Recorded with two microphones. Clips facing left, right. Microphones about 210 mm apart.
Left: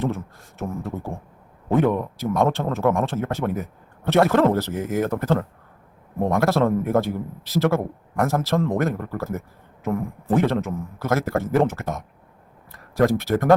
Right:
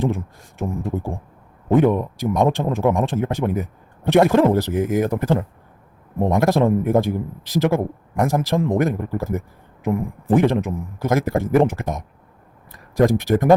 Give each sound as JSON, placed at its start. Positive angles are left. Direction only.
{"t": 0.0, "sound": "a man's voice", "side_deg": -15}